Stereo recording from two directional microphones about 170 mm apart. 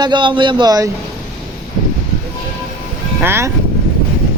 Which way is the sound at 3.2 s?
15° right (ahead or behind).